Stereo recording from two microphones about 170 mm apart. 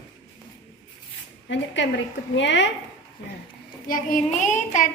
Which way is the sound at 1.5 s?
90° left.